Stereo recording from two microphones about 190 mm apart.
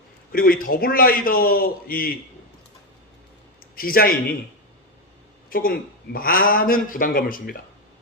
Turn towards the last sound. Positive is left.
turn(degrees=50)  # may be behind; listen again after turning